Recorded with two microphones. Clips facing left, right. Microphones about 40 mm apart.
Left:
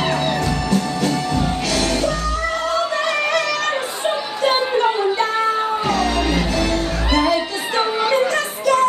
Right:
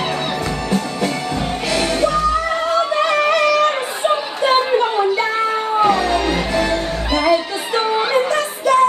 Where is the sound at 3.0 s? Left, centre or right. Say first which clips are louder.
Right 4 dB; right.